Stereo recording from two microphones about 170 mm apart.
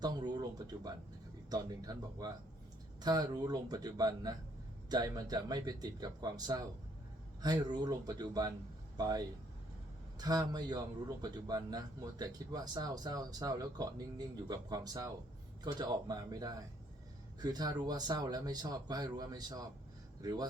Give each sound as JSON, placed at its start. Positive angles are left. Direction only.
{"t": 0.0, "sound": "speech", "side_deg": -25}